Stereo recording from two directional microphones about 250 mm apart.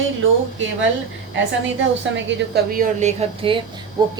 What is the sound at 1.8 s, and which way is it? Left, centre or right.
A woman's voice, right.